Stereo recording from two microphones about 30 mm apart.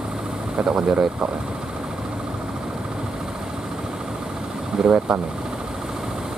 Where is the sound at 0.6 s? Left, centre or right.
Right.